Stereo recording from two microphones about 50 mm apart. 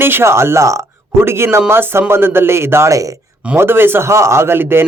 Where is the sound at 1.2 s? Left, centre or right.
Right.